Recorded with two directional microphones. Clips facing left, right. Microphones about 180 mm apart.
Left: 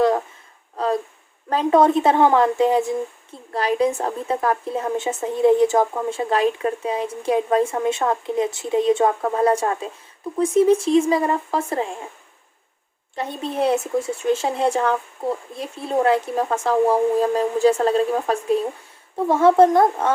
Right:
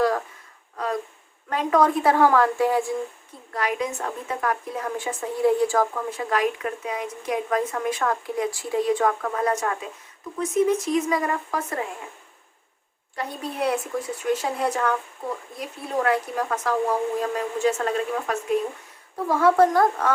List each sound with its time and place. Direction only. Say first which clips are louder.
1.5 s a woman's voice: left 4 dB; 30° left (ahead or behind)
3.5 s a woman's voice: left 7 dB; 30° left (ahead or behind)
13.1 s a woman's voice: left 5 dB; 25° left (ahead or behind)